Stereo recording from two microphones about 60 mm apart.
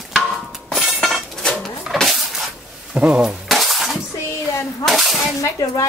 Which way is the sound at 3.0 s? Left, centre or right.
Centre.